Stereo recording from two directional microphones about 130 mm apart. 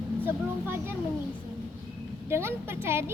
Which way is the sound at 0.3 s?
15° right (ahead or behind).